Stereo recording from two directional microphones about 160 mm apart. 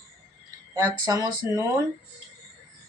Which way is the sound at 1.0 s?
20° right (ahead or behind).